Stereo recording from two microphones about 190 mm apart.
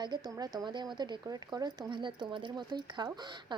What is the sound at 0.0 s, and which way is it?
A woman's voice, 20° right (ahead or behind).